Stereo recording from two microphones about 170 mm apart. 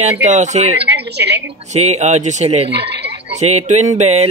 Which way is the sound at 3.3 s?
40° right (ahead or behind).